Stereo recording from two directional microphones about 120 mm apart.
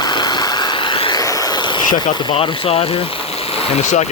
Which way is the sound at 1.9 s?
90° left.